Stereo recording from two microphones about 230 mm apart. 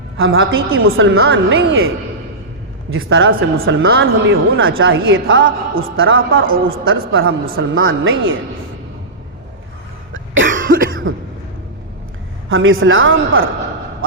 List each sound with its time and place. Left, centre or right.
0.2 s a woman's voice: right
2.9 s a woman's voice: right
10.1 s cough: right
12.5 s a woman's voice: right